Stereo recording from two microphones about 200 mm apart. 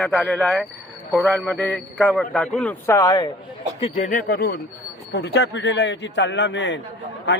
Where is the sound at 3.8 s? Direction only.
40° left (ahead or behind).